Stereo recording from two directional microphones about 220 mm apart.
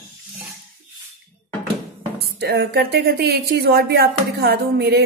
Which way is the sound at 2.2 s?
45° right (ahead or behind).